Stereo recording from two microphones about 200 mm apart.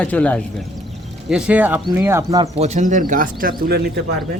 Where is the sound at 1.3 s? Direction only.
5° right (ahead or behind).